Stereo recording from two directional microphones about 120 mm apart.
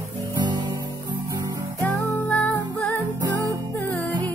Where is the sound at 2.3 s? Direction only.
10° left (ahead or behind).